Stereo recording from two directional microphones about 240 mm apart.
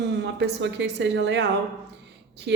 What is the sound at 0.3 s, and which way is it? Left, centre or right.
A woman's voice, right.